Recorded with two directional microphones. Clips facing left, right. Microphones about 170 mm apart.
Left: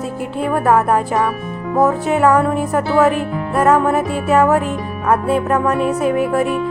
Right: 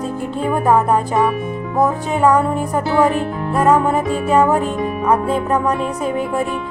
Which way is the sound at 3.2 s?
5° left (ahead or behind).